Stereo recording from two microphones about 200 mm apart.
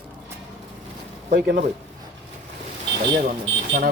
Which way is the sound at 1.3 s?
40° right (ahead or behind).